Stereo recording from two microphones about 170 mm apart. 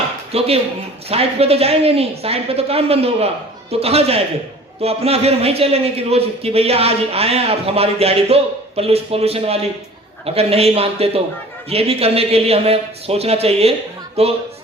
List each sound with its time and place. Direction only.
0.3 s a man's voice: 35° right (ahead or behind)